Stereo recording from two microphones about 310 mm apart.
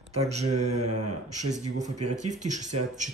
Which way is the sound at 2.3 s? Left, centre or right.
Right.